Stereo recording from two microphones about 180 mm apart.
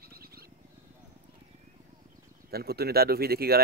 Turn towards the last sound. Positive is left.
turn(degrees=-60)  # may be behind; listen again after turning